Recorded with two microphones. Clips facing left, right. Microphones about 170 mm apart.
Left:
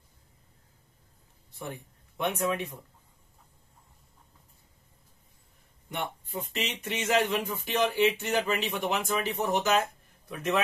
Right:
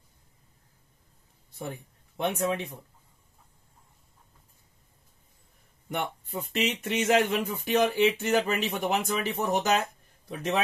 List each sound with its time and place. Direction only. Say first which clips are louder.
2.1 s speech: right 1 dB; 30° right (ahead or behind)
5.9 s speech: right 3 dB; 50° right (ahead or behind)
10.2 s a man's voice: even; 35° right (ahead or behind)